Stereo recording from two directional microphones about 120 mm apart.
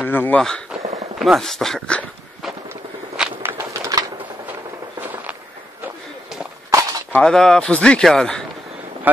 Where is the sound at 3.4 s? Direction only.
25° right (ahead or behind).